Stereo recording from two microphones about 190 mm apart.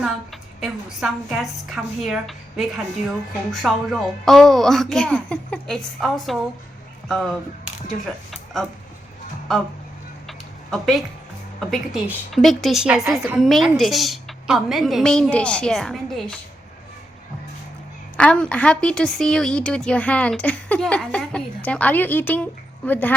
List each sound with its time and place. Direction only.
0.6 s a woman's voice: centre (ahead or behind)
10.2 s a sound: centre (ahead or behind)
11.7 s a woman's voice: centre (ahead or behind)
18.2 s a woman's voice: 5° left (ahead or behind)